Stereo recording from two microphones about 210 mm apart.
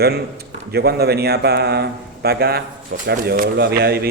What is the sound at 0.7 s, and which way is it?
Speech, 50° right (ahead or behind).